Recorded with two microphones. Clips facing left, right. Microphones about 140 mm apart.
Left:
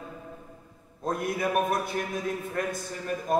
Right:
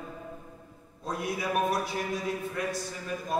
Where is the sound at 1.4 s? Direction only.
50° left (ahead or behind).